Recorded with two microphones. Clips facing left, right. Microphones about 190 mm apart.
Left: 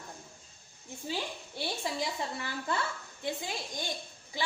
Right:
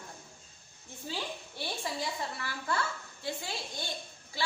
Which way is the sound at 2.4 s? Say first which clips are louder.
Left 1 dB; 20° left (ahead or behind).